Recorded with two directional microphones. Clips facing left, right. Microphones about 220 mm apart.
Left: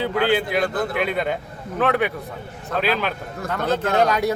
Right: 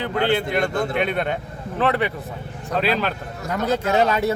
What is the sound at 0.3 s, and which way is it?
A man's voice, 5° left (ahead or behind).